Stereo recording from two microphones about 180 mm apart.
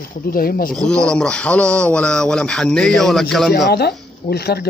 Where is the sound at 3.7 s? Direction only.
65° left (ahead or behind).